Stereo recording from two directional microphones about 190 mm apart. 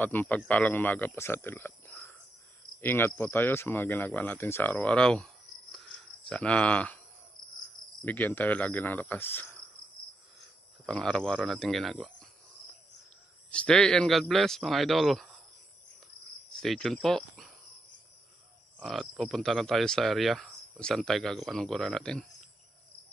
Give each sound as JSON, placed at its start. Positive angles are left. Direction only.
{"t": 0.0, "sound": "speech", "side_deg": 10}
{"t": 8.0, "sound": "speech", "side_deg": 10}
{"t": 10.9, "sound": "speech", "side_deg": 5}
{"t": 13.5, "sound": "speech", "side_deg": 5}
{"t": 16.5, "sound": "speech", "side_deg": 0}
{"t": 18.8, "sound": "speech", "side_deg": 0}